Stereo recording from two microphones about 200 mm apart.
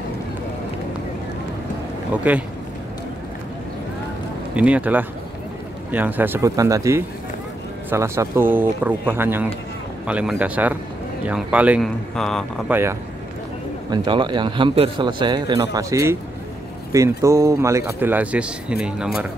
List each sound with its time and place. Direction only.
2.3 s speech: 5° right (ahead or behind)
4.6 s speech: 5° right (ahead or behind)
13.8 s a man's voice: 25° right (ahead or behind); by 19.2 s 5° right (ahead or behind)